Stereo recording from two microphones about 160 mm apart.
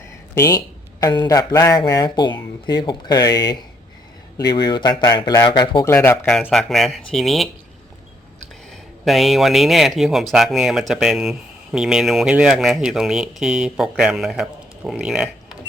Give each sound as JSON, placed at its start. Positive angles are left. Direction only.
{"t": 0.3, "sound": "speech", "side_deg": 20}
{"t": 5.8, "sound": "speech", "side_deg": 15}
{"t": 6.2, "sound": "speech", "side_deg": 5}
{"t": 9.0, "sound": "speech", "side_deg": 0}